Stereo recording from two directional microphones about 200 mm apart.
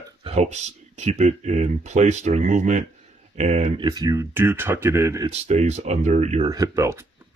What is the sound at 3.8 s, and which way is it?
Speech, 20° right (ahead or behind).